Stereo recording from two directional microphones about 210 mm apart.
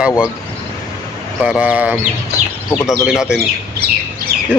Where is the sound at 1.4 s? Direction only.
5° right (ahead or behind).